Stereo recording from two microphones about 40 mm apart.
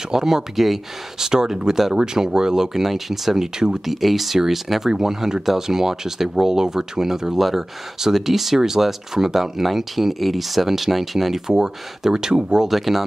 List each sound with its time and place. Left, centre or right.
0.1 s speech: centre
3.8 s speech: centre
12.6 s speech: centre